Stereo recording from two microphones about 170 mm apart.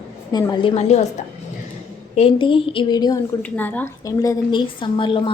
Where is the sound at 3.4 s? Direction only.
10° left (ahead or behind); by 5.2 s 30° left (ahead or behind).